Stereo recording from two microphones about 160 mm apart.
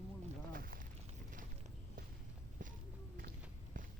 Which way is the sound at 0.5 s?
65° right (ahead or behind).